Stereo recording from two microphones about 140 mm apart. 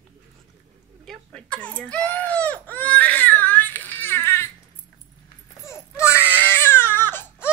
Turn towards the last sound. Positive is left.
turn(degrees=15)  # may be behind; listen again after turning